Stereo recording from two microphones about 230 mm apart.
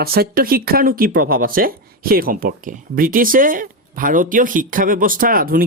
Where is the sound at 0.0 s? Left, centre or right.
Right.